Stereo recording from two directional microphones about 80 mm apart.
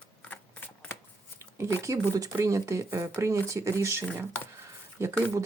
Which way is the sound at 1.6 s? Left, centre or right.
Right.